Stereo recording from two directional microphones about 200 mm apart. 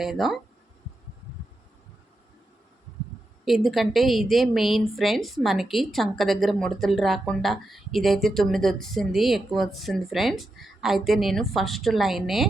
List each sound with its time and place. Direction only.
0.0 s a woman's voice: centre (ahead or behind)
3.4 s a woman's voice: centre (ahead or behind)